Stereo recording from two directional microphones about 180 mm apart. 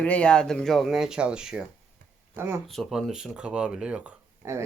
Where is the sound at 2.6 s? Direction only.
Centre (ahead or behind).